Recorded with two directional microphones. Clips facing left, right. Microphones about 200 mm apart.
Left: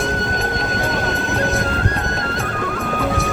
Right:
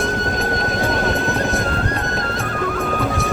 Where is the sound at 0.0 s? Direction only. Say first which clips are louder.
Right 1 dB; centre (ahead or behind).